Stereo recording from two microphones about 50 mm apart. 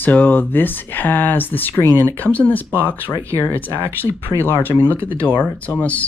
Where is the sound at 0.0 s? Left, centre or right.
Left.